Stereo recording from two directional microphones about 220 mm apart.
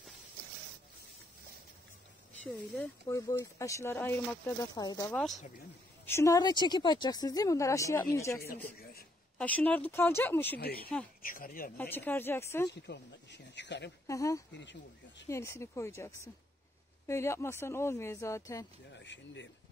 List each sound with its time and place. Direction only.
2.4 s speech: 10° left (ahead or behind)
4.7 s speech: 15° left (ahead or behind)
5.1 s speech: centre (ahead or behind)
6.0 s speech: 15° left (ahead or behind)
9.4 s speech: 5° left (ahead or behind)
10.6 s speech: 45° left (ahead or behind)
11.7 s speech: 10° left (ahead or behind)
12.7 s speech: 50° left (ahead or behind)
14.0 s speech: 15° left (ahead or behind)
14.5 s speech: 55° left (ahead or behind)
15.2 s speech: 10° left (ahead or behind)
18.9 s speech: 55° left (ahead or behind)